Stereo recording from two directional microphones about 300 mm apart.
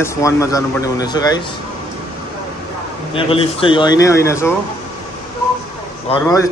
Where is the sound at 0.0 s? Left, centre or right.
Centre.